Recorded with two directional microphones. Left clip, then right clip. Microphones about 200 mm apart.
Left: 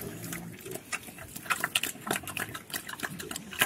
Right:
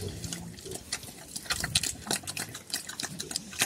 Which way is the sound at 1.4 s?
5° right (ahead or behind).